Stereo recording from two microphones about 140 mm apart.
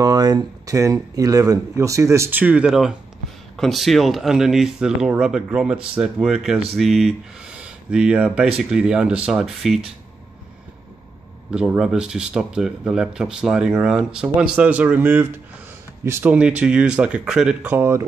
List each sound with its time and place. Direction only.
0.0 s speech: 30° right (ahead or behind); by 9.8 s centre (ahead or behind)
11.5 s speech: 5° right (ahead or behind)